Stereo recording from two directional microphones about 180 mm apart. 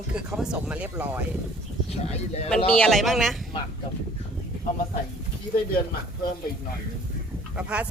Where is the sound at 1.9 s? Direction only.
35° left (ahead or behind).